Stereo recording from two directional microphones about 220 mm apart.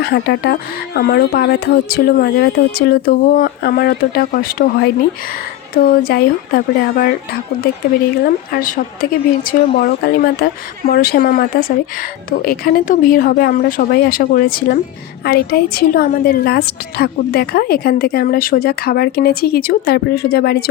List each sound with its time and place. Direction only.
0.0 s a woman's voice: 50° left (ahead or behind)
8.2 s a woman's voice: 40° left (ahead or behind)
12.5 s a woman's voice: 40° left (ahead or behind)